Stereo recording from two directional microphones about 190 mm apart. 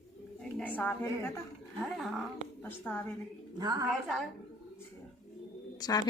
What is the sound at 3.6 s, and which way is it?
Speech, 20° right (ahead or behind).